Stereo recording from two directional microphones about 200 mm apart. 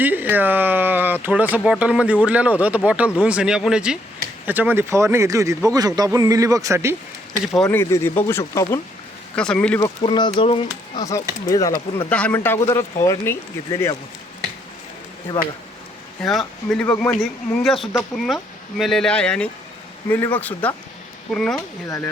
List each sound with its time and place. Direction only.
0.0 s speech: 10° right (ahead or behind)
7.4 s speech: centre (ahead or behind)
9.8 s speech: 25° left (ahead or behind)
11.9 s speech: 5° left (ahead or behind)
16.2 s speech: centre (ahead or behind)
21.8 s speech: 15° left (ahead or behind)